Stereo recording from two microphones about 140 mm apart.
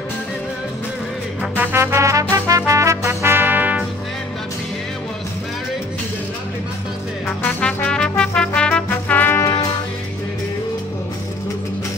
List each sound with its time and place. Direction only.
1.4 s music: 10° right (ahead or behind)
7.2 s music: 5° left (ahead or behind)